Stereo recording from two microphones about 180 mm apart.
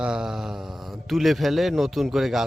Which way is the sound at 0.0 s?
5° right (ahead or behind).